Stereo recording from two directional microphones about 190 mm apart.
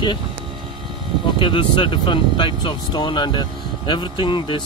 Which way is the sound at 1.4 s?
25° left (ahead or behind).